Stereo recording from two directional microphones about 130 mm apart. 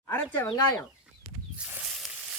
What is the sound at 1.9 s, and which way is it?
Sizzle, 5° right (ahead or behind).